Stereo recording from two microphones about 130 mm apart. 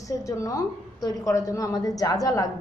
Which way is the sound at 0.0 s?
25° left (ahead or behind).